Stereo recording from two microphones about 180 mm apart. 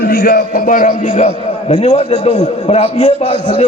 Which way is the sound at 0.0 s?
60° left (ahead or behind).